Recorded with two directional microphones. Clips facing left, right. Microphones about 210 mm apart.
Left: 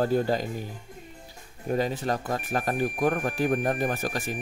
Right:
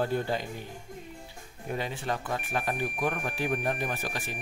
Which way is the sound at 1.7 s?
40° left (ahead or behind).